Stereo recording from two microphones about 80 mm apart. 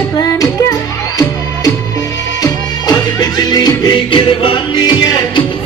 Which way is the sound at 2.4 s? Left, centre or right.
Left.